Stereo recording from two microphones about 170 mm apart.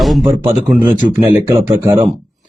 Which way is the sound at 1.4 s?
20° right (ahead or behind).